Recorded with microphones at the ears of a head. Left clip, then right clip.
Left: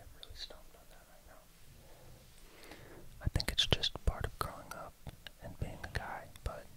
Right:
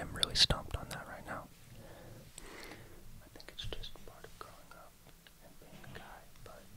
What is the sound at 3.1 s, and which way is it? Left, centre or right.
Whispering, left.